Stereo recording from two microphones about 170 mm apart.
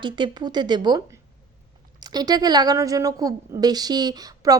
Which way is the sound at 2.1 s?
25° right (ahead or behind).